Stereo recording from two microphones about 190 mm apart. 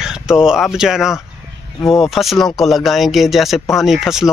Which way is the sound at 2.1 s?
Centre (ahead or behind).